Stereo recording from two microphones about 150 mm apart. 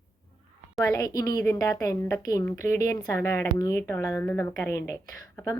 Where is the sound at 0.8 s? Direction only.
20° left (ahead or behind).